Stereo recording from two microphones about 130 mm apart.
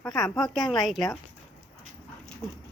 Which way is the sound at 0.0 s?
5° left (ahead or behind).